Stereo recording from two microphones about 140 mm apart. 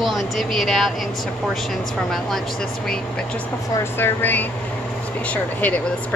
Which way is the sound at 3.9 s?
15° left (ahead or behind).